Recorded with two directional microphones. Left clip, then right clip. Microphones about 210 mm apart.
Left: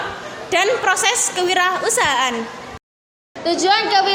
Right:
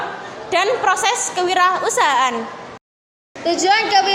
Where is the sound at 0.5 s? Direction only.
15° left (ahead or behind).